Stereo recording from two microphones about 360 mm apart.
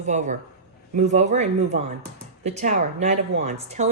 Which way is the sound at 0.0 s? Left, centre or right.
Centre.